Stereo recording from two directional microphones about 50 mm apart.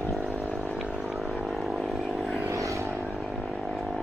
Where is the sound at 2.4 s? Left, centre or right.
Right.